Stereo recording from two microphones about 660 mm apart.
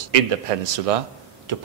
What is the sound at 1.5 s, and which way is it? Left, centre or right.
Tick-tock, right.